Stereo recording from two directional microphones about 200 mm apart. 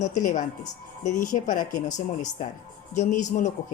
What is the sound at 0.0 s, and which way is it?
Speech, 40° left (ahead or behind).